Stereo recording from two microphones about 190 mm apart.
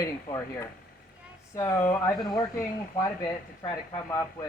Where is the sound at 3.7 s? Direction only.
20° left (ahead or behind).